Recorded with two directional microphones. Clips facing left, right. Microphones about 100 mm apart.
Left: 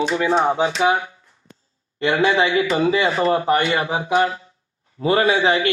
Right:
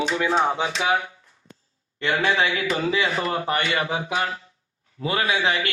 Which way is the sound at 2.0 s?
20° left (ahead or behind).